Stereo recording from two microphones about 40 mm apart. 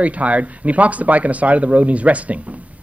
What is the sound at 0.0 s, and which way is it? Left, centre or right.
A man's voice, right.